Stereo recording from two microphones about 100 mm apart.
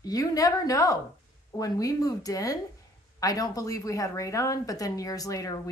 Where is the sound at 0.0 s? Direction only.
35° left (ahead or behind).